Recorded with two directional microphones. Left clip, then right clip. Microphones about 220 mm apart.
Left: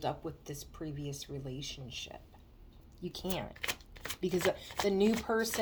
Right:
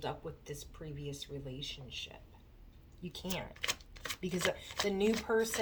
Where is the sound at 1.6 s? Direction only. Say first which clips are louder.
Even; 55° left (ahead or behind).